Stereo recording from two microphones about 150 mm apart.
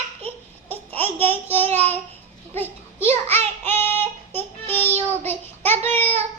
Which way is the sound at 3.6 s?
15° left (ahead or behind).